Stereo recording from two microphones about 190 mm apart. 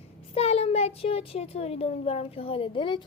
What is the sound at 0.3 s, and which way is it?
A child's voice, 30° left (ahead or behind).